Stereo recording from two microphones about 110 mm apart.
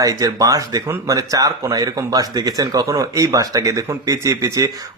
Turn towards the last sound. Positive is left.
turn(degrees=-30)  # may be behind; listen again after turning